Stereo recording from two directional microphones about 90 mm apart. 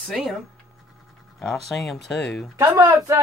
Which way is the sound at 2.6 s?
45° right (ahead or behind).